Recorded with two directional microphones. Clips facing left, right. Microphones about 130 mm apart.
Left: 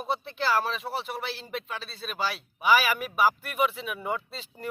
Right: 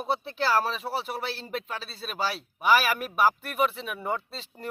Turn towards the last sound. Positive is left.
turn(degrees=0)  # may be behind; listen again after turning